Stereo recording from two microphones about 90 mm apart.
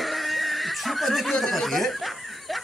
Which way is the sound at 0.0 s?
Centre (ahead or behind).